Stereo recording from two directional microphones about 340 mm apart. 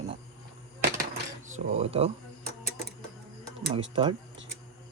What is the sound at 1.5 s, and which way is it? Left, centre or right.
Speech, centre.